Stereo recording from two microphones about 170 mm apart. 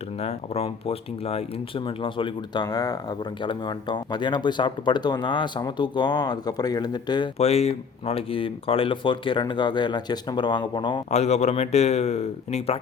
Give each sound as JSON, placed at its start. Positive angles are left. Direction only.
{"t": 0.2, "sound": "speech", "side_deg": 40}
{"t": 7.3, "sound": "speech", "side_deg": 40}
{"t": 11.1, "sound": "speech", "side_deg": 40}